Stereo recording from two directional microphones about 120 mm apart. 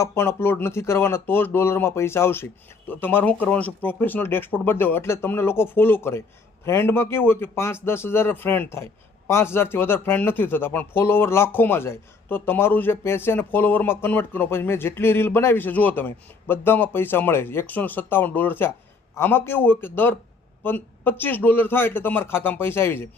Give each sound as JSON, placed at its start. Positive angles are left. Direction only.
{"t": 0.0, "sound": "speech", "side_deg": 20}